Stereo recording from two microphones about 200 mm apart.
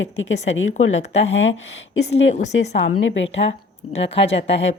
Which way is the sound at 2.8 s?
70° left (ahead or behind).